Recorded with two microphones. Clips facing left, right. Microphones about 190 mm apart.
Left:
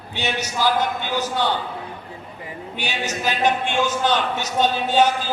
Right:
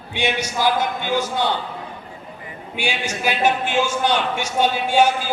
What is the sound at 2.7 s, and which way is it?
A man's voice, 10° right (ahead or behind).